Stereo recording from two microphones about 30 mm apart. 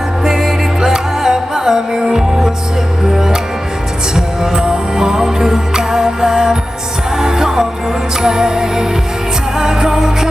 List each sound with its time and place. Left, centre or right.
0.3 s music: centre
4.1 s music: right